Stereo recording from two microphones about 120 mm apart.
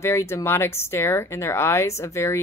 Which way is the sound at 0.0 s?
25° left (ahead or behind).